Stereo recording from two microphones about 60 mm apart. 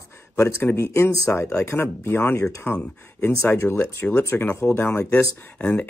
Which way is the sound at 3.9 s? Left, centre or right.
Left.